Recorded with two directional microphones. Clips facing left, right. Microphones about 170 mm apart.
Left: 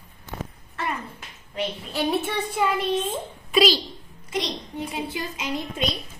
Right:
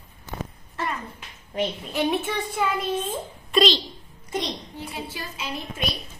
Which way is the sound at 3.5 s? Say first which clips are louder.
Left 1 dB; 5° left (ahead or behind).